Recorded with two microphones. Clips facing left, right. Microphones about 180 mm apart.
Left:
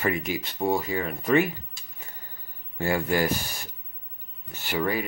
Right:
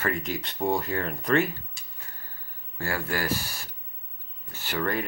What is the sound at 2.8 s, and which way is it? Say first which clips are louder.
Speech: left 6 dB; 20° left (ahead or behind).